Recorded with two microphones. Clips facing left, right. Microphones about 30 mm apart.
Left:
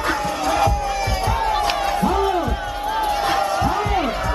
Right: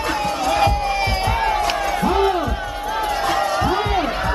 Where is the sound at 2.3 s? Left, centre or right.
Centre.